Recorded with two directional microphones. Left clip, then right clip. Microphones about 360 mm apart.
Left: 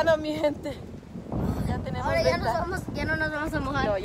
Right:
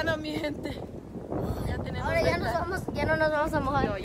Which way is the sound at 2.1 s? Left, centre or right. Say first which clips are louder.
Left 2 dB; centre.